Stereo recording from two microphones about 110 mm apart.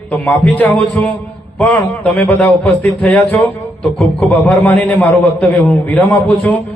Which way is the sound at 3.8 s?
5° left (ahead or behind).